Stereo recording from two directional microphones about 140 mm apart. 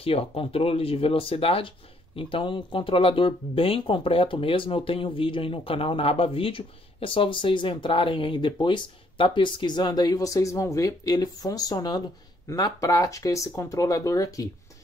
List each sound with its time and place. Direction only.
0.0 s speech: 45° left (ahead or behind); by 14.5 s 25° left (ahead or behind)